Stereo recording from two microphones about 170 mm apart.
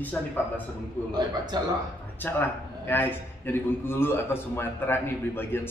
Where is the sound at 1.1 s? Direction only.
25° right (ahead or behind).